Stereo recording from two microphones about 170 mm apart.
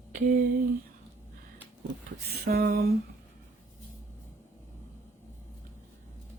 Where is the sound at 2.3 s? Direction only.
65° right (ahead or behind).